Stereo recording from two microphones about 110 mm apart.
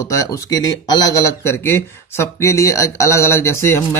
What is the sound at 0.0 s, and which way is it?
Speech, 30° left (ahead or behind).